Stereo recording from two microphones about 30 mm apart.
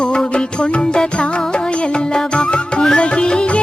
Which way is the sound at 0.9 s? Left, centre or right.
Left.